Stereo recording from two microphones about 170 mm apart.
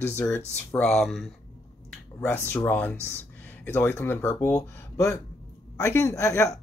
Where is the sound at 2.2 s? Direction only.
10° left (ahead or behind).